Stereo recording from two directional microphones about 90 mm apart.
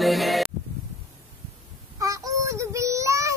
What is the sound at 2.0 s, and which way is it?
Child singing, 40° right (ahead or behind).